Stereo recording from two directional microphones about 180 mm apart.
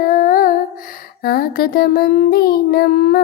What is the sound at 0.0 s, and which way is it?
Humming, 50° left (ahead or behind).